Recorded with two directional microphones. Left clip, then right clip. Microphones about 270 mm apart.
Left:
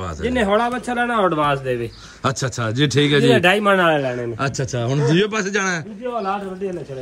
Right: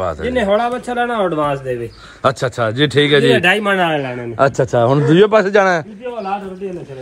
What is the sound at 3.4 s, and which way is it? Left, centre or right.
Speech, centre.